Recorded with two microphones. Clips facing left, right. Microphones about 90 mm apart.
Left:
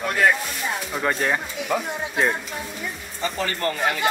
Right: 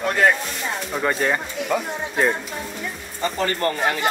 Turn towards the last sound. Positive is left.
turn(degrees=0)  # may be behind; listen again after turning